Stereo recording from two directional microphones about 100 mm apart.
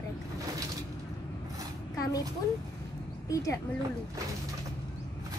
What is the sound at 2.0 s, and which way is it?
Vehicle, 35° left (ahead or behind).